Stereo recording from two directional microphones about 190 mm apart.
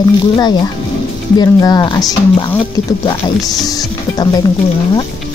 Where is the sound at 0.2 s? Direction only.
25° left (ahead or behind).